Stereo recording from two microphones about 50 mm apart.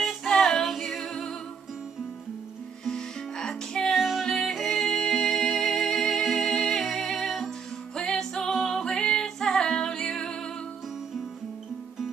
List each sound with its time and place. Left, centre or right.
0.0 s female singing: centre
0.7 s humming: centre
2.8 s music: centre
4.0 s music: centre
8.0 s music: centre